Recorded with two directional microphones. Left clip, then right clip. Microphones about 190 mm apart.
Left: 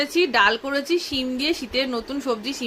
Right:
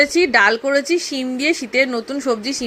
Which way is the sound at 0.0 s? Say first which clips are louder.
Right 5 dB; 20° right (ahead or behind).